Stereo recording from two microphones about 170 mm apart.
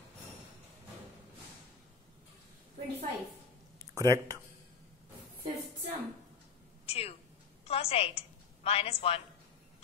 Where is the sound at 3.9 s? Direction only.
20° right (ahead or behind).